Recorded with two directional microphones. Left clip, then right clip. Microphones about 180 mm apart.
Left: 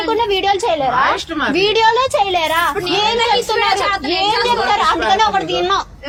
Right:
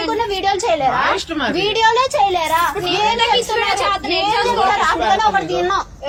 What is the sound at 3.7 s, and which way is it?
Speech, 30° left (ahead or behind).